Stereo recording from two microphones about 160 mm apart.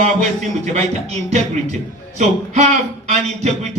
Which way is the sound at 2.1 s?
45° right (ahead or behind).